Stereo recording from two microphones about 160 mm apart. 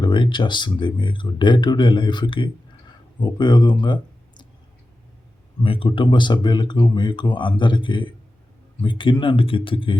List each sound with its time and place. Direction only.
0.0 s speech: 30° left (ahead or behind)
5.6 s speech: 35° left (ahead or behind)